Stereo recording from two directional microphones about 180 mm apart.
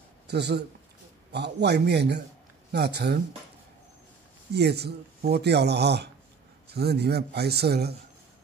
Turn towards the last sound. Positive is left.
turn(degrees=-65)  # may be behind; listen again after turning